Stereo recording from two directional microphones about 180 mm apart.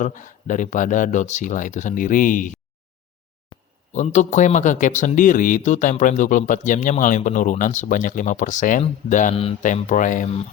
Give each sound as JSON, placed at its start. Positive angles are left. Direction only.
{"t": 0.0, "sound": "a man's voice", "side_deg": 45}
{"t": 3.5, "sound": "a sound", "side_deg": 25}
{"t": 3.9, "sound": "a man's voice", "side_deg": 40}
{"t": 9.3, "sound": "a man's voice", "side_deg": 35}